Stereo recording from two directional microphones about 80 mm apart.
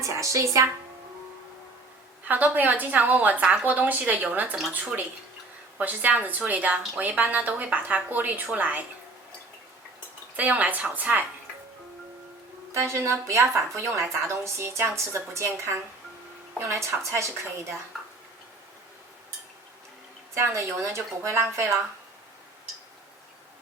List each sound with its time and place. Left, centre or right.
0.0 s a woman's voice: right
2.2 s a woman's voice: right
10.3 s a woman's voice: centre
12.7 s a woman's voice: right
20.3 s a woman's voice: right